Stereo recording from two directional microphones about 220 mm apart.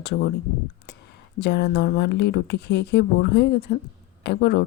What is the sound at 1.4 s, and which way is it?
Speech, 50° left (ahead or behind).